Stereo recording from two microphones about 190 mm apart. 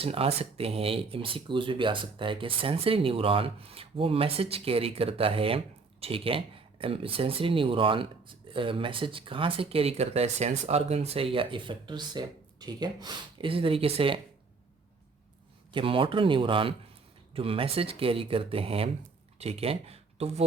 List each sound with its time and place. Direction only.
0.0 s speech: 30° right (ahead or behind)
15.7 s speech: 30° right (ahead or behind)